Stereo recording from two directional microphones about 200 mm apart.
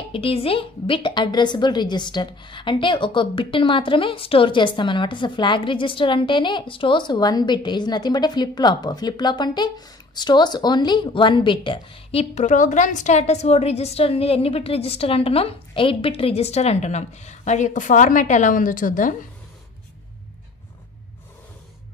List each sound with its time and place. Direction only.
0.1 s a woman's voice: 30° left (ahead or behind)